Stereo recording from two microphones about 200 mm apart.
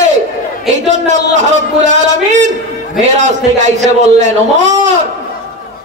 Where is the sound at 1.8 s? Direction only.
35° right (ahead or behind).